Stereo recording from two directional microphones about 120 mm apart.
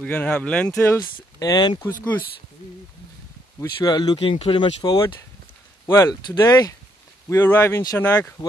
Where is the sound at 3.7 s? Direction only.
35° left (ahead or behind).